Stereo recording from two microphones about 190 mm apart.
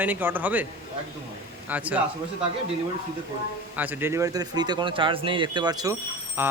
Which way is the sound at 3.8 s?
10° right (ahead or behind).